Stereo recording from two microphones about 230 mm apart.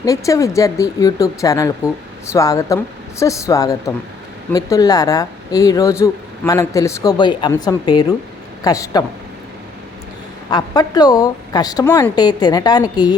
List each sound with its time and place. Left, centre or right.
0.0 s speech: centre
10.5 s speech: centre